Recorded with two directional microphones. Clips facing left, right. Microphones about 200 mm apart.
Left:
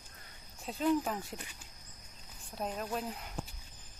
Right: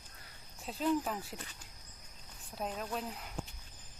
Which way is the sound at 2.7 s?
5° left (ahead or behind).